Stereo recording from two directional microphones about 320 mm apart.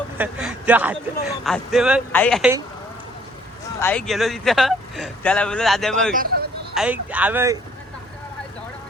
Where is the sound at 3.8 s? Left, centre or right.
Centre.